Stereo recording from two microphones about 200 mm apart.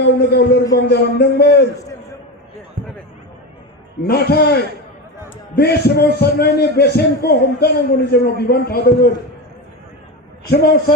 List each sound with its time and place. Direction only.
0.0 s speech: 55° left (ahead or behind)
4.0 s a man's voice: 55° left (ahead or behind)
10.5 s a man's voice: 50° left (ahead or behind)